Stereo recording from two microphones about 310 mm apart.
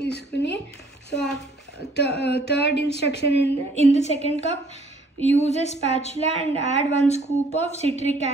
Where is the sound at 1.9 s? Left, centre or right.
Left.